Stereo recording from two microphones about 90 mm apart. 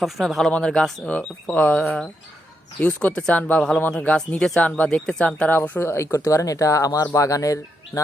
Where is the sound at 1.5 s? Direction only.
20° left (ahead or behind).